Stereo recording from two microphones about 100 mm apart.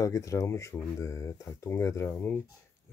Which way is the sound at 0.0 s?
35° left (ahead or behind).